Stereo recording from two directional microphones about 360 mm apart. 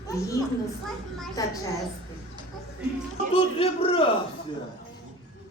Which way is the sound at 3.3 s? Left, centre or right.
Centre.